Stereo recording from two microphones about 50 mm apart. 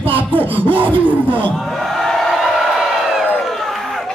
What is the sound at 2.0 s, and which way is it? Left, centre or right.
Crowd, centre.